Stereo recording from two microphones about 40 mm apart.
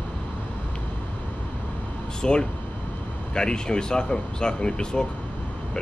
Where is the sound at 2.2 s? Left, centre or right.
Centre.